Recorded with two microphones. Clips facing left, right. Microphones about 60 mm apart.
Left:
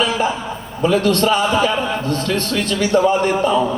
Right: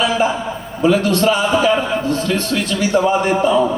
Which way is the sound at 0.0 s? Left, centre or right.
Left.